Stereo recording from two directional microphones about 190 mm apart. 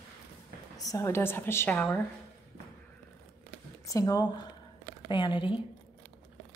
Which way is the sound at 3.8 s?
15° left (ahead or behind).